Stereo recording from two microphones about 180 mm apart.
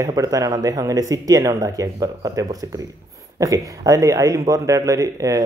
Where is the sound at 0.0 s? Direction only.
20° right (ahead or behind).